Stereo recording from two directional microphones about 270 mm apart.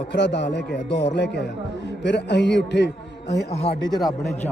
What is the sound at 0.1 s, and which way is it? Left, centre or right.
A man's voice, left.